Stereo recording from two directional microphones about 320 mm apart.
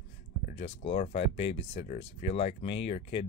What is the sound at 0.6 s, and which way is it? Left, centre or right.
Speech, centre.